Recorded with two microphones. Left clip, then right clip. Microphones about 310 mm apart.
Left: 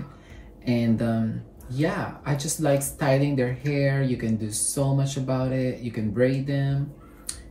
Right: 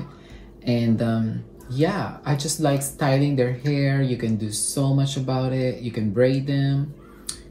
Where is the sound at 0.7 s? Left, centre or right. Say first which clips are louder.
Right 2 dB; centre.